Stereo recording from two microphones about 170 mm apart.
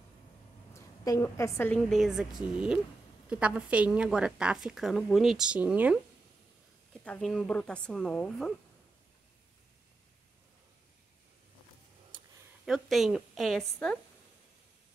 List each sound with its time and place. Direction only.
0.7 s a woman's voice: 20° left (ahead or behind)
1.9 s a woman's voice: centre (ahead or behind)
6.9 s a woman's voice: 5° left (ahead or behind)
12.6 s a woman's voice: centre (ahead or behind)